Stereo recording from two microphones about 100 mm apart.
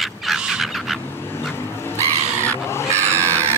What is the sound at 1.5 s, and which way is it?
Vehicle, 25° left (ahead or behind).